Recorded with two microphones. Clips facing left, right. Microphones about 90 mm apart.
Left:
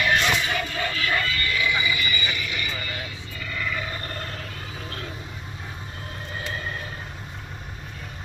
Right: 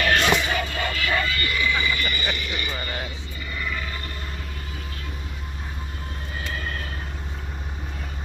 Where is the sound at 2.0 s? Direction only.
50° right (ahead or behind).